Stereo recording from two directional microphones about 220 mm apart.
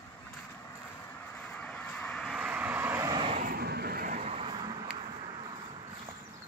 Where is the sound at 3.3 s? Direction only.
35° right (ahead or behind); by 5.8 s 20° right (ahead or behind).